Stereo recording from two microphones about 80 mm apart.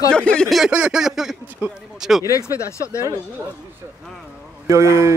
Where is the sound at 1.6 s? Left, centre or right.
Right.